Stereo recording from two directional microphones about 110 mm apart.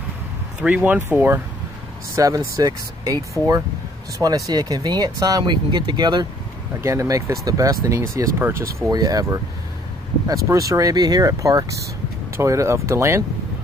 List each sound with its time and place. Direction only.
0.6 s speech: 15° right (ahead or behind); by 6.2 s 40° right (ahead or behind)
6.8 s speech: 30° right (ahead or behind)
8.9 s speech: 35° right (ahead or behind)